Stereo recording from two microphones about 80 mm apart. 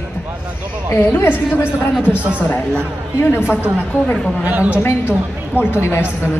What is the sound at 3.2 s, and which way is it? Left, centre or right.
Speech, left.